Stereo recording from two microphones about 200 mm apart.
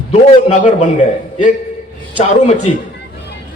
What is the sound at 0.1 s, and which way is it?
A man's voice, 35° left (ahead or behind).